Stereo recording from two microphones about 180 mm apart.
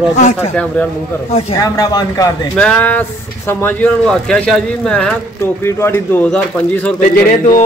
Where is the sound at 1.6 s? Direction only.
20° left (ahead or behind).